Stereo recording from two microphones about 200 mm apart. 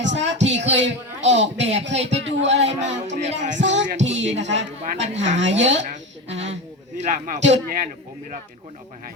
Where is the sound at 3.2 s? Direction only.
35° right (ahead or behind).